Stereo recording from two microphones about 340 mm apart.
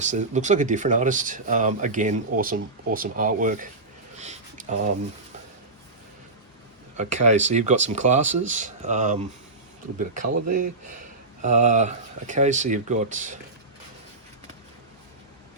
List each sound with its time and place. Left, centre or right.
0.0 s speech: right
4.2 s a sound: right
6.9 s speech: right